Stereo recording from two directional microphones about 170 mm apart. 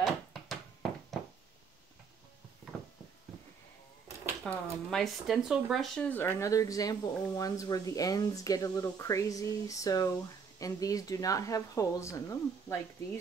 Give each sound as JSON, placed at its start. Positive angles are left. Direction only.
{"t": 0.0, "sound": "a sound", "side_deg": 0}
{"t": 4.5, "sound": "speech", "side_deg": 5}
{"t": 6.2, "sound": "speech", "side_deg": 20}